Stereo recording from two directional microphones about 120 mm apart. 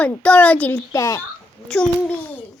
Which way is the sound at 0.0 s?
10° left (ahead or behind).